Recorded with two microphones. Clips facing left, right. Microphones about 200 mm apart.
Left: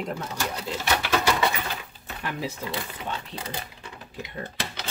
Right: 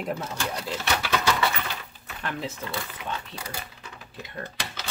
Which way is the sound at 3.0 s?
30° left (ahead or behind).